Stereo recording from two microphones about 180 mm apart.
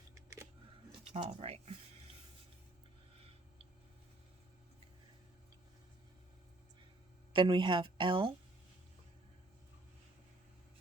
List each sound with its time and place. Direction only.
0.1 s a sound: 15° right (ahead or behind)
1.1 s speech: 35° right (ahead or behind)
7.3 s a woman's voice: 25° right (ahead or behind)